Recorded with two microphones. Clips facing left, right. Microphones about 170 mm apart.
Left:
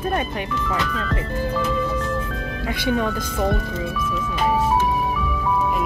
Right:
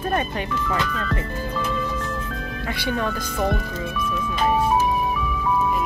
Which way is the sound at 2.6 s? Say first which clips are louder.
Left 3 dB; 10° left (ahead or behind).